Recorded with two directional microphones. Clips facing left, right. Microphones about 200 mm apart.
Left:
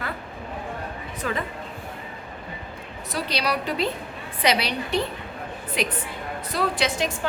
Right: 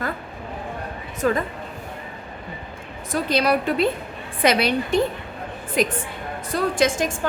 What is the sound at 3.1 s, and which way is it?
A woman's voice, 50° right (ahead or behind).